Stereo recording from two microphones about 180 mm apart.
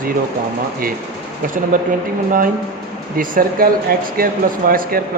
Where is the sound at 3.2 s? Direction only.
50° right (ahead or behind).